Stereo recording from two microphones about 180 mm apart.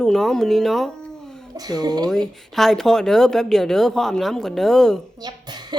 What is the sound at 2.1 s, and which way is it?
Speech, centre (ahead or behind).